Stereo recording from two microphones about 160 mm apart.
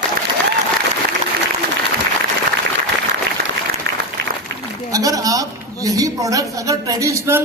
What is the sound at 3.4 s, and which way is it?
Applause, 75° right (ahead or behind).